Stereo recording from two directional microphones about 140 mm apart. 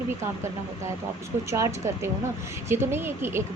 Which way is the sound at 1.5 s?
20° right (ahead or behind).